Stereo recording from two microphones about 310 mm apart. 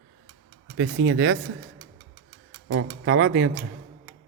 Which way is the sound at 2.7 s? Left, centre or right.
Right.